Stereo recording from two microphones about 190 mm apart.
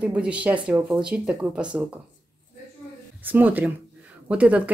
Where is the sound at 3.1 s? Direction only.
10° right (ahead or behind).